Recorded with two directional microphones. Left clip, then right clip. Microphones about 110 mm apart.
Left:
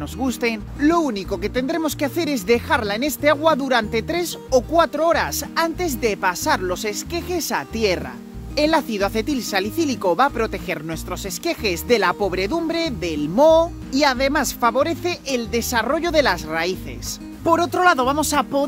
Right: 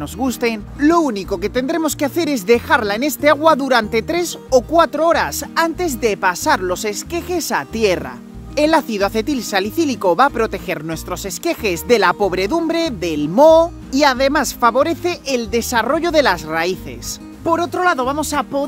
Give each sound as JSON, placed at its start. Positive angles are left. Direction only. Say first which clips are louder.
{"t": 0.2, "sound": "speech", "louder": "right 3 dB", "side_deg": -50}
{"t": 17.5, "sound": "speech", "louder": "even", "side_deg": 10}